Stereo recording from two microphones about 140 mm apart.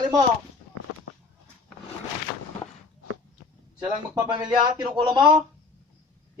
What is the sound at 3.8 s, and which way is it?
A man's voice, 30° right (ahead or behind).